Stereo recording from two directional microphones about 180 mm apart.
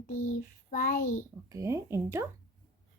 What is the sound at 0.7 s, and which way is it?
Speech, 50° left (ahead or behind).